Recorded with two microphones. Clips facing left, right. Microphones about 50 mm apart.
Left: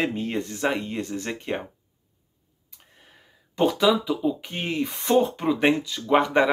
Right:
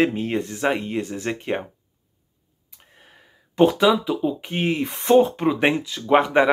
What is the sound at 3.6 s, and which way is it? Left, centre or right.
Speech, right.